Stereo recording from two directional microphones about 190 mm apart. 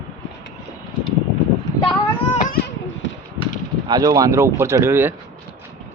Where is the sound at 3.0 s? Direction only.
80° left.